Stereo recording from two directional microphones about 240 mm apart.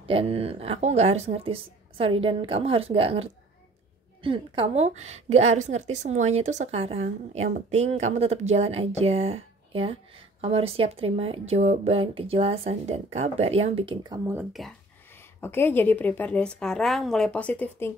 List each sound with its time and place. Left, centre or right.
0.0 s a woman's voice: right; by 14.7 s centre
15.4 s a woman's voice: centre